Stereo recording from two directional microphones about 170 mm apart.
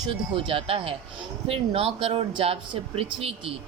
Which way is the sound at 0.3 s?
30° right (ahead or behind).